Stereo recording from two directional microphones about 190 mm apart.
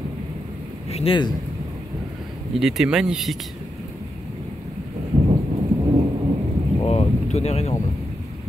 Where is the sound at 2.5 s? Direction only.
Centre (ahead or behind).